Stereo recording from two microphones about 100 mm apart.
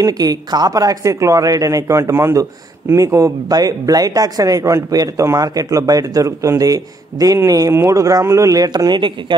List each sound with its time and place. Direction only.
0.0 s speech: 40° right (ahead or behind)